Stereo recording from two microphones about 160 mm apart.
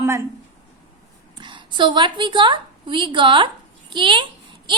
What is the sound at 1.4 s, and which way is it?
A woman's voice, 30° right (ahead or behind).